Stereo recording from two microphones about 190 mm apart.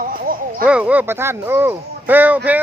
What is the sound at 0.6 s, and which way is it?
Speech, 5° right (ahead or behind).